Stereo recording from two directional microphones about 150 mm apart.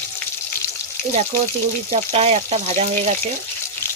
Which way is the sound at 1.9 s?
45° right (ahead or behind).